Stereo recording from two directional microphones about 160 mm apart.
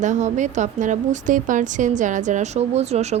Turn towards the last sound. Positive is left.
turn(degrees=-45)  # may be behind; listen again after turning